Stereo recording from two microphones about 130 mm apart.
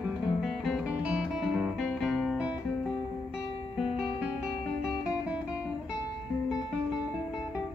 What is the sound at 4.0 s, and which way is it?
Music, 10° right (ahead or behind).